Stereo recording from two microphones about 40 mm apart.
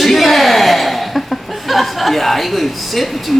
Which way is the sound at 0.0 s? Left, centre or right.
Centre.